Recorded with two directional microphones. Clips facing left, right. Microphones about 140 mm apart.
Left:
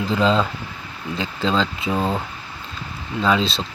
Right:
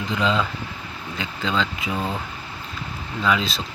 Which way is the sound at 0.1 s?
35° left (ahead or behind).